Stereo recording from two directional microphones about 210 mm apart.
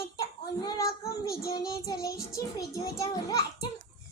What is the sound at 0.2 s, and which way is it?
Child singing, 15° left (ahead or behind).